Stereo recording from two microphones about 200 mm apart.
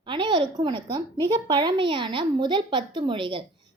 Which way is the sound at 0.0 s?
25° right (ahead or behind).